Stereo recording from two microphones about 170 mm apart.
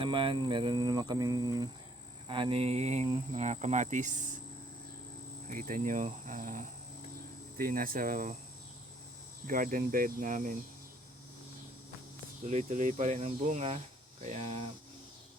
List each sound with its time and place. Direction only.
0.0 s speech: 30° right (ahead or behind)
2.2 s a sound: 30° right (ahead or behind)
3.3 s speech: 40° right (ahead or behind)
5.5 s speech: 50° right (ahead or behind)
7.6 s speech: 55° right (ahead or behind)
9.5 s speech: 55° right (ahead or behind)
12.5 s speech: 45° right (ahead or behind)
14.3 s a sound: 40° right (ahead or behind)